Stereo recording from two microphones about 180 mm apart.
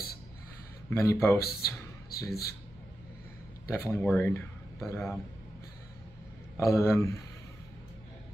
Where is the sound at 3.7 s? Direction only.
15° left (ahead or behind).